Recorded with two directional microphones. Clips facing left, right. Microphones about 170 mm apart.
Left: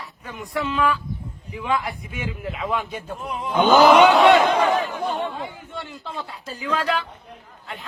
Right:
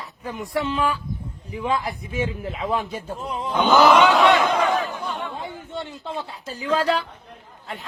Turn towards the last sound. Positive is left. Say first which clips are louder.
# right 3 dB
turn(degrees=-35)  # may be behind; listen again after turning